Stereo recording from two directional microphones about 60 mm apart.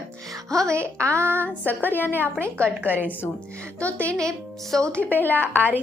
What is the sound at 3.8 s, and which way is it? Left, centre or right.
Speech, left.